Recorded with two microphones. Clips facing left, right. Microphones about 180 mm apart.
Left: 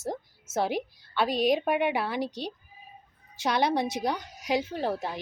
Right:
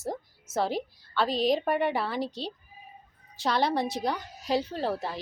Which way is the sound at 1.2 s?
55° left (ahead or behind).